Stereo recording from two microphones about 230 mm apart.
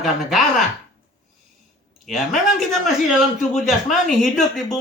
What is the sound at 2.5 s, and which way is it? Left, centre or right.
Speech, centre.